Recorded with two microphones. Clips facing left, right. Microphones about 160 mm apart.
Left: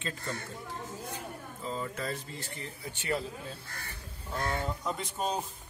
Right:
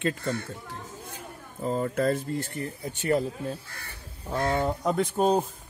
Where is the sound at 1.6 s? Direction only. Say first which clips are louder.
Right 10 dB; 55° right (ahead or behind).